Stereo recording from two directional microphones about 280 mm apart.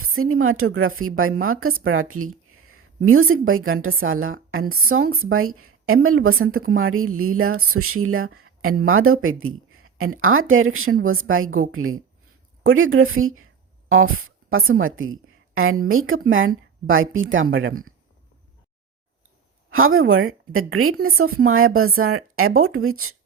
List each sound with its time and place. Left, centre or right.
0.0 s a woman's voice: right
19.7 s a woman's voice: right